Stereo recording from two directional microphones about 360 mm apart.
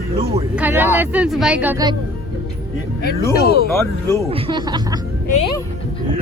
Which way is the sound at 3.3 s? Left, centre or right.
Left.